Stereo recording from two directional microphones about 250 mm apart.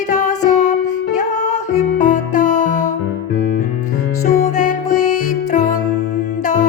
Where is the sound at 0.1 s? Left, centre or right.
Left.